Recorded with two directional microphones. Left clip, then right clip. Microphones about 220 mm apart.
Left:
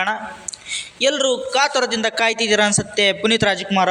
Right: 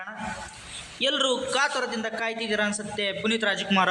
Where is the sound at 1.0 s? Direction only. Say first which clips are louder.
Left 6 dB; 25° left (ahead or behind).